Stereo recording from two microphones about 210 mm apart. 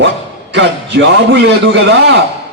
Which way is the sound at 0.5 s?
55° right (ahead or behind).